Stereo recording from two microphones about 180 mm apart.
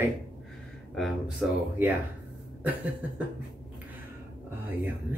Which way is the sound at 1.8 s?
10° right (ahead or behind).